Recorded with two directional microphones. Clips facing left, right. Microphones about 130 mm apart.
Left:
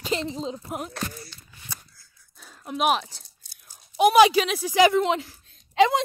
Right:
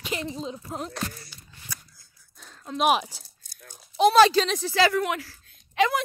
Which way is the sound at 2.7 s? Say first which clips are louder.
Right 1 dB; centre (ahead or behind).